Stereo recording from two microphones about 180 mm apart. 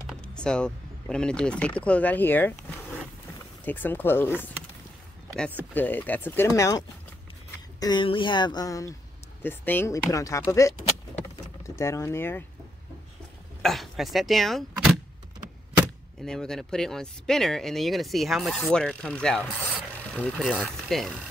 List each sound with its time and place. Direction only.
0.0 s speech: 5° left (ahead or behind)
3.6 s speech: 10° left (ahead or behind)
5.8 s speech: 10° left (ahead or behind)
11.8 s speech: 15° left (ahead or behind)
13.6 s speech: centre (ahead or behind)
16.3 s speech: 5° left (ahead or behind)